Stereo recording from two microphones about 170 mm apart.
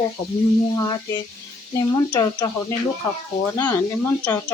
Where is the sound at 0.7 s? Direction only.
20° left (ahead or behind).